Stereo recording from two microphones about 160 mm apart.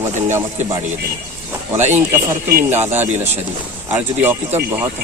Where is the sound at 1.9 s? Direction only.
15° right (ahead or behind).